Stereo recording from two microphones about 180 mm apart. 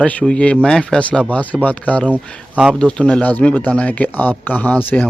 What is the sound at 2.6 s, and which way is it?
A man's voice, 5° right (ahead or behind).